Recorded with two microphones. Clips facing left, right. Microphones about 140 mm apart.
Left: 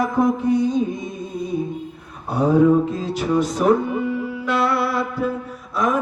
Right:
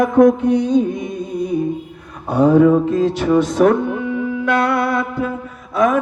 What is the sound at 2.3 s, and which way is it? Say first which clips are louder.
Speech: right 4 dB; 65° right (ahead or behind).